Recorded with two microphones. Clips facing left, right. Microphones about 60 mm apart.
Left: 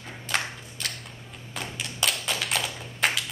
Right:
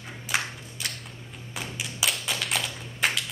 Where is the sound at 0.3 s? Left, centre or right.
Centre.